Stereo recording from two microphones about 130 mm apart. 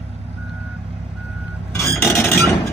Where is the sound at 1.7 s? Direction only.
20° left (ahead or behind).